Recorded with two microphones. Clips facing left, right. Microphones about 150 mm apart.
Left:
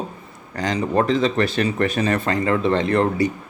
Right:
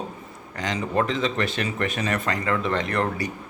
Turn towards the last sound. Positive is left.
turn(degrees=25)  # may be behind; listen again after turning